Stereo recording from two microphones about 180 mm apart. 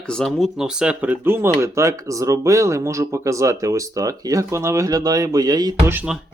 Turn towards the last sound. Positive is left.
turn(degrees=-5)  # may be behind; listen again after turning